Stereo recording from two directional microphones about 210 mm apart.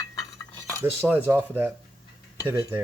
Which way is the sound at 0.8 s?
10° right (ahead or behind).